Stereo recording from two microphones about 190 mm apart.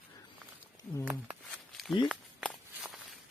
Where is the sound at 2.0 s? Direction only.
Centre (ahead or behind).